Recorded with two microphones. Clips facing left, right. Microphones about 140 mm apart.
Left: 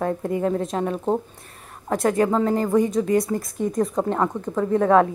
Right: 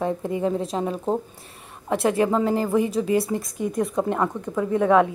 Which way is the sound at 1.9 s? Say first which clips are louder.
Left 1 dB; 25° right (ahead or behind).